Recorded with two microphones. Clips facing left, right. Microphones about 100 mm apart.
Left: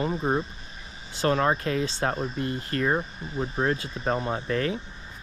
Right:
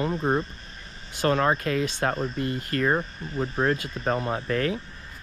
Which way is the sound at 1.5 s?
35° left (ahead or behind).